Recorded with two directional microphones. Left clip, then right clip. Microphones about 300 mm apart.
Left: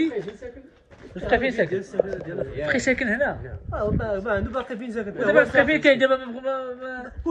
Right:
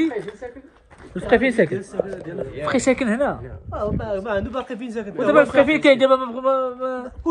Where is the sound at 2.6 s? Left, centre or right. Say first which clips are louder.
Right 3 dB; right.